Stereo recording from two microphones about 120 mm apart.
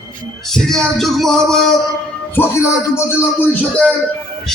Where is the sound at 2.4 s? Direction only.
20° left (ahead or behind).